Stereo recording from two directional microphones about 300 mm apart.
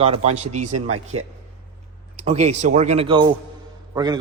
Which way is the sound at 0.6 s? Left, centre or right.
Right.